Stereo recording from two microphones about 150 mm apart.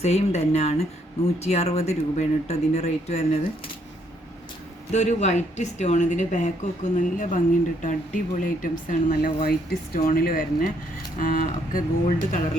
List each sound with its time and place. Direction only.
0.0 s speech: 45° left (ahead or behind)
4.9 s speech: 50° left (ahead or behind); by 12.4 s 65° left (ahead or behind)